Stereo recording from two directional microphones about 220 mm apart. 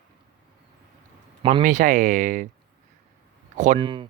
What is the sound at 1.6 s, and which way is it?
Speech, 35° right (ahead or behind).